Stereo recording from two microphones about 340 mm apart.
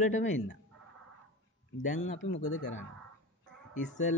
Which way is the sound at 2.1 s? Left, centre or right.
Left.